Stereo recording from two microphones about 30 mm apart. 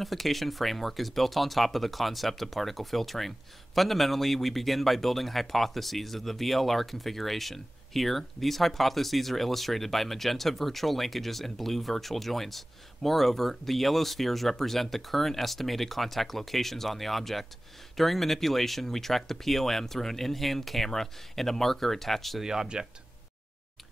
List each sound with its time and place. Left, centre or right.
0.0 s speech: centre
22.4 s speech: centre